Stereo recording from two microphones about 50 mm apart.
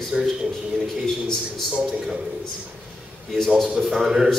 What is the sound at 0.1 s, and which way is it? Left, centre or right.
Speech, centre.